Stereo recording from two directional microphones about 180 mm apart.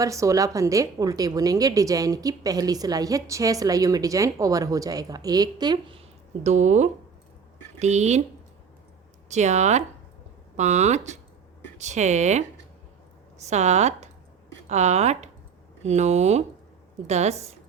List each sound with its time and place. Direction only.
0.0 s a woman's voice: 15° right (ahead or behind)
6.4 s speech: 40° right (ahead or behind)
9.3 s speech: 40° right (ahead or behind)